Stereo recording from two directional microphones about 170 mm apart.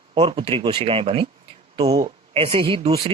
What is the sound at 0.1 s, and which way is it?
Speech, 30° right (ahead or behind).